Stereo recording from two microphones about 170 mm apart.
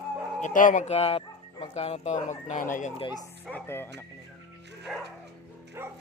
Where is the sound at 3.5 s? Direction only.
10° left (ahead or behind).